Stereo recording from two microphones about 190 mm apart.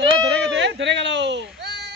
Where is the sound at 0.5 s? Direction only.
70° right (ahead or behind).